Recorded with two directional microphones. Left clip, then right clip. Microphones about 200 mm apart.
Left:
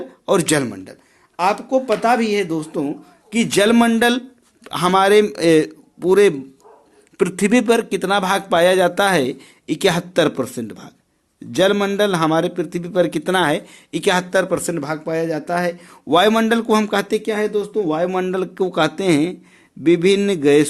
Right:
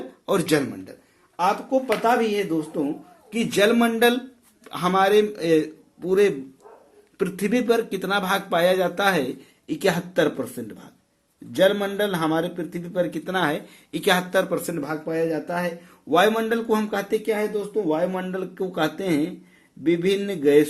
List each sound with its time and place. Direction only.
0.3 s a man's voice: 35° left (ahead or behind)